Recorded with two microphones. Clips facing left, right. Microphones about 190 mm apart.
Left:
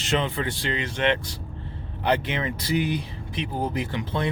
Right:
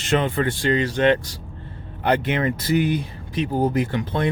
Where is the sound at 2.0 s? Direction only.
55° right (ahead or behind).